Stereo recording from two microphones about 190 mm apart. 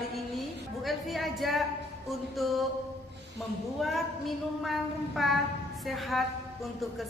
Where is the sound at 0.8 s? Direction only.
Centre (ahead or behind).